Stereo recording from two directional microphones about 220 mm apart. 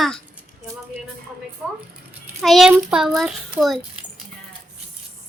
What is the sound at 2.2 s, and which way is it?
A child's voice, centre (ahead or behind).